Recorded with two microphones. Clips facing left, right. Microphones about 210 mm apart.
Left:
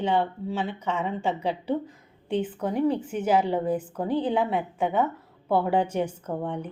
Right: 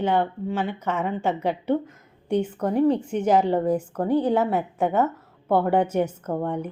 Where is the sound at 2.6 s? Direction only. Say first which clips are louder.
Right 5 dB; 35° right (ahead or behind).